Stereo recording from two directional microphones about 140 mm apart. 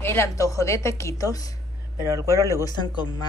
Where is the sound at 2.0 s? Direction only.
20° right (ahead or behind).